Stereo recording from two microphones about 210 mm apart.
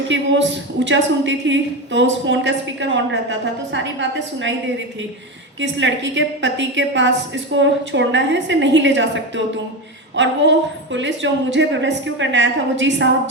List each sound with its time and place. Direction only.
0.1 s a woman's voice: 60° right (ahead or behind)
5.5 s a woman's voice: 60° right (ahead or behind)